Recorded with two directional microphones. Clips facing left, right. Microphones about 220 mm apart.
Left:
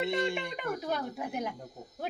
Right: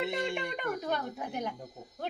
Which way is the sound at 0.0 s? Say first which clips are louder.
Left 2 dB; 5° right (ahead or behind).